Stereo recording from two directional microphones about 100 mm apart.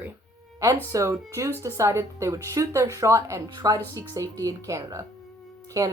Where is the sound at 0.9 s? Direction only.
30° right (ahead or behind).